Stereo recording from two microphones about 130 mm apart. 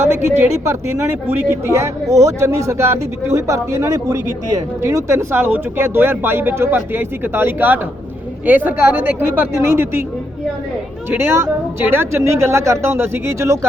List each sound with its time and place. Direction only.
0.0 s speech: 20° right (ahead or behind)
11.1 s speech: 20° right (ahead or behind)